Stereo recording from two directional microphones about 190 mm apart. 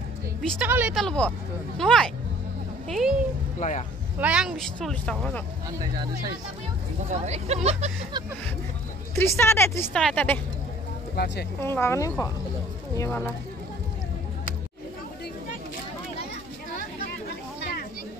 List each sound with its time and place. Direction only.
0.4 s a woman's voice: centre (ahead or behind)
0.7 s speech: 10° right (ahead or behind)
0.9 s speech: 5° left (ahead or behind)
3.5 s speech: 40° left (ahead or behind)
4.2 s speech: 5° right (ahead or behind)
7.1 s speech: 35° right (ahead or behind)
9.1 s speech: 15° left (ahead or behind)
11.1 s speech: 60° left (ahead or behind)
11.6 s speech: 15° left (ahead or behind)